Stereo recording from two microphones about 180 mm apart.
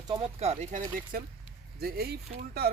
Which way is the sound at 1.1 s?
50° right (ahead or behind).